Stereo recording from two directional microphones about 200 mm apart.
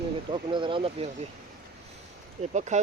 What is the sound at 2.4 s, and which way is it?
Speech, 35° right (ahead or behind).